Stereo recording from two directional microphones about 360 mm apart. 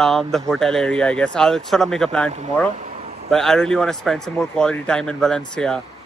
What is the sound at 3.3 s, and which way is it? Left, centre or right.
Speech, centre.